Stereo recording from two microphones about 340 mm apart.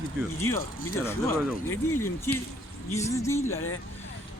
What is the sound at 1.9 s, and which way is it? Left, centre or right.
Speech, centre.